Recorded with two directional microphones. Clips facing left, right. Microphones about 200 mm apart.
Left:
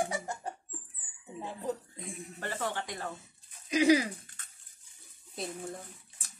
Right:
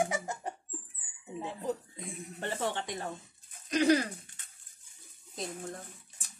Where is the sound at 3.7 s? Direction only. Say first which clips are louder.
Left 1 dB; 10° left (ahead or behind).